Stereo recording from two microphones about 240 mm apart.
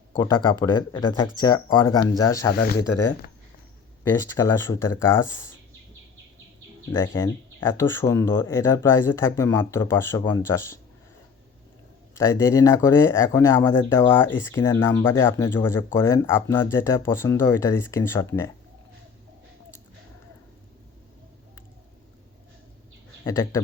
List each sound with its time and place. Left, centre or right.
0.1 s speech: centre
2.5 s speech: left
4.0 s speech: centre
6.9 s speech: centre
12.1 s speech: centre
23.2 s speech: centre